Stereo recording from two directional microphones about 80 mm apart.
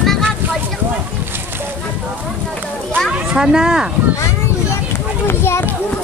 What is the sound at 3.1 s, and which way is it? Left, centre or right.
Children playing, centre.